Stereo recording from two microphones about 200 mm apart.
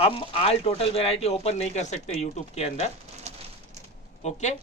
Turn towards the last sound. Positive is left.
turn(degrees=35)  # may be behind; listen again after turning